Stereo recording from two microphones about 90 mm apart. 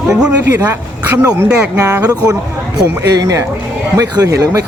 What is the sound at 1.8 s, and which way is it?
Speech, 40° right (ahead or behind).